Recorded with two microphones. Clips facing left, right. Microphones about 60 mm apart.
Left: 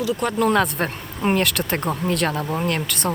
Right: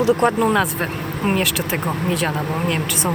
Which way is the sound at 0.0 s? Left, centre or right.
Right.